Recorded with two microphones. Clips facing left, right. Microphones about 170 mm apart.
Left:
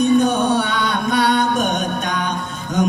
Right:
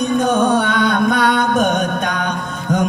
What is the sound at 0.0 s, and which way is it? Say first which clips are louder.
Music: even; 50° right (ahead or behind).